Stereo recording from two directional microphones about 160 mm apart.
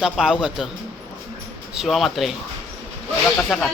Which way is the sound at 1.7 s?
Centre (ahead or behind).